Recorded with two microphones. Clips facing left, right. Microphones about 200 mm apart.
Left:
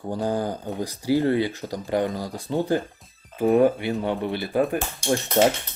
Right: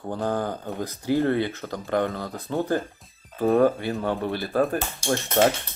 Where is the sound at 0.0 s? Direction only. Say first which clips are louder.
Left 1 dB; 10° left (ahead or behind).